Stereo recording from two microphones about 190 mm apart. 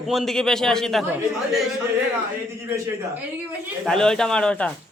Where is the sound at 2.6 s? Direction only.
15° right (ahead or behind).